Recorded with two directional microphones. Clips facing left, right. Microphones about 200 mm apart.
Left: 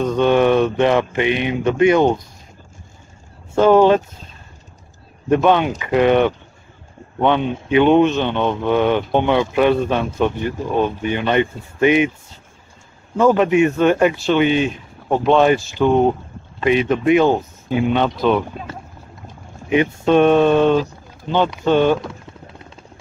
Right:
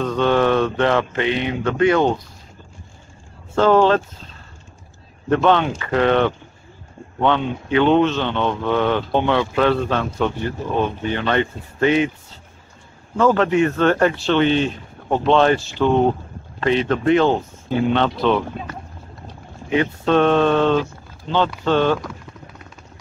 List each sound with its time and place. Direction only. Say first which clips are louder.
0.0 s speech: left 3 dB; 20° left (ahead or behind)
3.5 s speech: left 3 dB; 15° left (ahead or behind)
5.3 s speech: left 2 dB; 15° left (ahead or behind)
13.2 s speech: left 2 dB; 15° left (ahead or behind)
19.7 s speech: left 3 dB; 15° left (ahead or behind)